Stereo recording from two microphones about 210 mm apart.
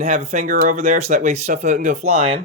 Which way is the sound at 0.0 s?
40° right (ahead or behind).